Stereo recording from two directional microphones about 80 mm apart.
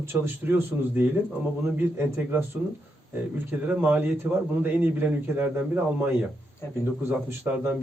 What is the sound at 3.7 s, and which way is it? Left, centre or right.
A man's voice, right.